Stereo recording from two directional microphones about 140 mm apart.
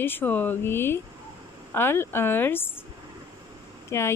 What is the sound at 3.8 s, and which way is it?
Speech, 20° left (ahead or behind).